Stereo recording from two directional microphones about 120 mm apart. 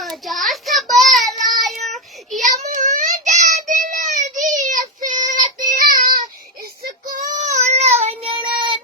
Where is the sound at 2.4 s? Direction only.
90° right.